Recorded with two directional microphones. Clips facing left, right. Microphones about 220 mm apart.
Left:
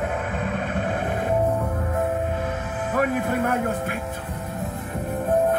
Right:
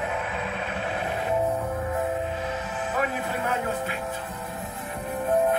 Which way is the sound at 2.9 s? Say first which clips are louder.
Left 7 dB; 55° left (ahead or behind).